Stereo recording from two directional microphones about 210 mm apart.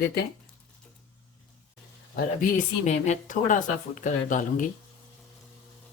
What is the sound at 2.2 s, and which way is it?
Speech, 40° left (ahead or behind).